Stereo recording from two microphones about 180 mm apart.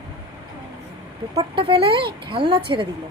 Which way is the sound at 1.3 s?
30° right (ahead or behind).